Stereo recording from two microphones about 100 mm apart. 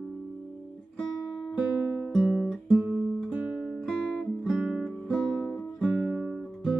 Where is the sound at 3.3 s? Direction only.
10° right (ahead or behind).